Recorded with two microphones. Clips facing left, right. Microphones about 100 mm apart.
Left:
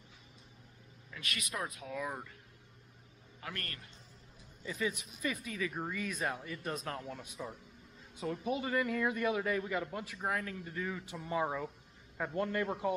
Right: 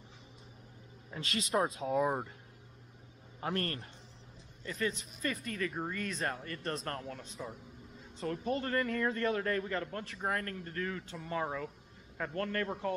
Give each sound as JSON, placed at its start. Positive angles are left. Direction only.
{"t": 1.1, "sound": "speech", "side_deg": -30}
{"t": 3.3, "sound": "a man's voice", "side_deg": -35}
{"t": 4.6, "sound": "a man's voice", "side_deg": 10}